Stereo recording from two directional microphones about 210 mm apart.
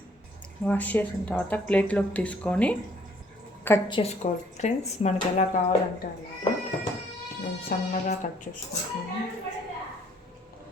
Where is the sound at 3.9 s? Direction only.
30° left (ahead or behind).